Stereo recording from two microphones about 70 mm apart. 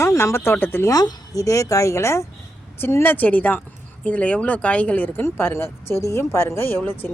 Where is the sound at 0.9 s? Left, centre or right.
Left.